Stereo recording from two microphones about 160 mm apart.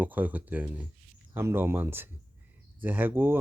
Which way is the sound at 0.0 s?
10° right (ahead or behind).